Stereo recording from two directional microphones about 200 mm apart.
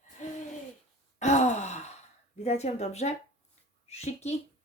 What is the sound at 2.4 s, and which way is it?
A woman's voice, 35° left (ahead or behind).